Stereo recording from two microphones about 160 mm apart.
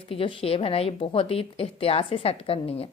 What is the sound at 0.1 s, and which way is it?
A woman's voice, 35° left (ahead or behind).